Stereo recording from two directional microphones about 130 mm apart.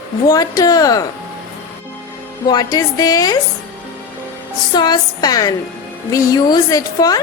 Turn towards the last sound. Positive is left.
turn(degrees=30)  # may be behind; listen again after turning